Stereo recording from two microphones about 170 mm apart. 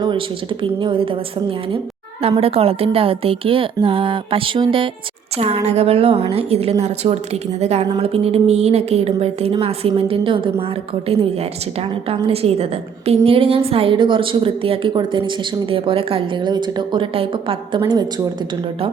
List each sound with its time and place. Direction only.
0.6 s a woman's voice: 30° right (ahead or behind)